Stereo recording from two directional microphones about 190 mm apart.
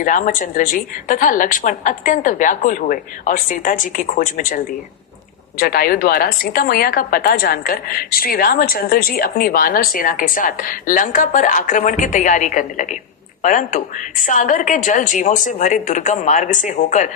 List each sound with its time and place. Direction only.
0.0 s a woman's voice: 45° left (ahead or behind)